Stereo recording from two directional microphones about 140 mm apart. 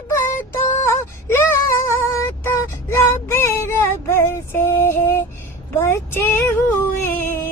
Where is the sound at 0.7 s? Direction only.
15° left (ahead or behind).